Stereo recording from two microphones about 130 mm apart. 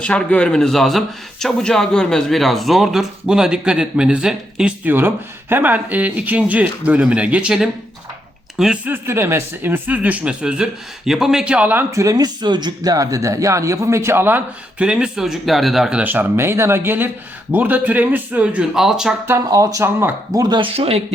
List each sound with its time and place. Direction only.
0.0 s a man's voice: 10° left (ahead or behind)
19.3 s speech: 25° right (ahead or behind)
20.4 s speech: 35° right (ahead or behind)
20.7 s speech: 50° right (ahead or behind)